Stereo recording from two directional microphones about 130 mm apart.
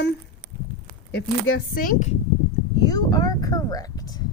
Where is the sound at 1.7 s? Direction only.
90° left.